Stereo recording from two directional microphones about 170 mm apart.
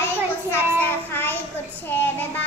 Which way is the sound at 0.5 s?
15° left (ahead or behind).